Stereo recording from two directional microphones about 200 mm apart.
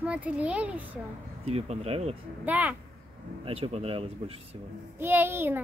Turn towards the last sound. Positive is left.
turn(degrees=-10)  # may be behind; listen again after turning